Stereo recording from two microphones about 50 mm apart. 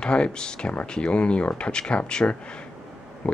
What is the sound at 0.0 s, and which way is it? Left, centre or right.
Speech, centre.